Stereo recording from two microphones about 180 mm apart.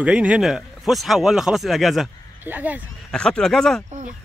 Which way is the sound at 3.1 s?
5° left (ahead or behind).